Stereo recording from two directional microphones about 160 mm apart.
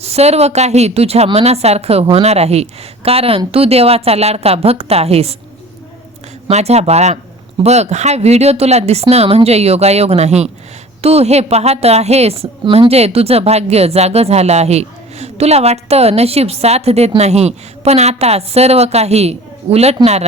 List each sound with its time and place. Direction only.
0.0 s a woman's voice: 40° right (ahead or behind)
6.5 s a woman's voice: 40° right (ahead or behind)